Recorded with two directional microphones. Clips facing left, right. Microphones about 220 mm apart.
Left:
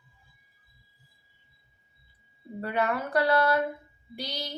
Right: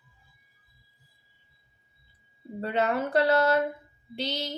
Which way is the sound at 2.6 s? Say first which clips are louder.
Right 2 dB; 25° right (ahead or behind).